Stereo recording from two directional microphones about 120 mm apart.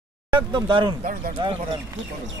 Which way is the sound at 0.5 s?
40° right (ahead or behind).